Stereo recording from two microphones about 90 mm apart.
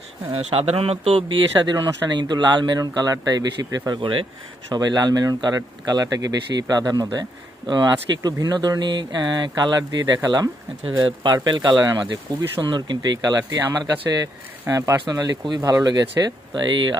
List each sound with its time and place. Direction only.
0.3 s speech: 90° right
1.6 s speech: 55° right (ahead or behind)
4.0 s speech: 75° right (ahead or behind)
4.7 s speech: 50° right (ahead or behind)
11.0 s a man's voice: 60° right (ahead or behind); by 14.2 s 45° right (ahead or behind)
14.7 s speech: 35° right (ahead or behind)
15.0 s speech: 45° right (ahead or behind)
16.6 s a man's voice: 60° right (ahead or behind)